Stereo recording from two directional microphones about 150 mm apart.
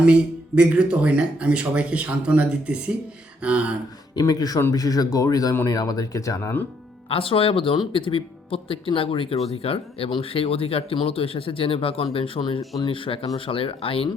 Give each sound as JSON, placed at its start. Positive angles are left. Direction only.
{"t": 0.0, "sound": "speech", "side_deg": -10}
{"t": 4.1, "sound": "speech", "side_deg": 25}
{"t": 7.1, "sound": "speech", "side_deg": 40}